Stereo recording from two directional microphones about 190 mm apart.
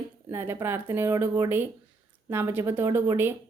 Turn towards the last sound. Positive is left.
turn(degrees=-10)  # may be behind; listen again after turning